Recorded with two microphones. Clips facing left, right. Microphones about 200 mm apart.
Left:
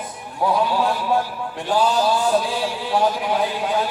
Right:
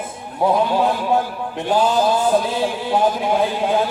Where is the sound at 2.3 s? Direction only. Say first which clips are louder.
Right 3 dB; 20° right (ahead or behind).